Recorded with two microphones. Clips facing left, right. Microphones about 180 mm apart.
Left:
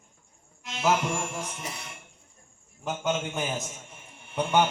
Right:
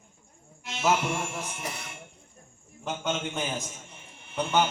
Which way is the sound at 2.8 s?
Centre (ahead or behind).